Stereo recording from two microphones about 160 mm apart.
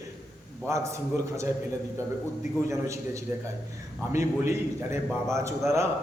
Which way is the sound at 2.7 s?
20° right (ahead or behind).